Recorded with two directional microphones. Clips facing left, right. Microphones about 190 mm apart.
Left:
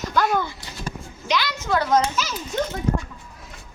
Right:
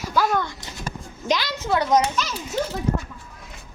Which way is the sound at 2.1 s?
Centre (ahead or behind).